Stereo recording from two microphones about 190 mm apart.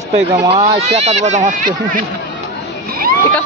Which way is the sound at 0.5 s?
35° right (ahead or behind).